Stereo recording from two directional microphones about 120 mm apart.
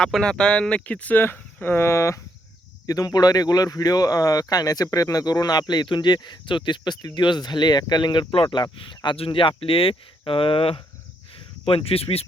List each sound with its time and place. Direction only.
0.0 s speech: 5° left (ahead or behind); by 8.4 s 45° left (ahead or behind)
8.4 s speech: 30° left (ahead or behind)
9.0 s speech: 50° left (ahead or behind)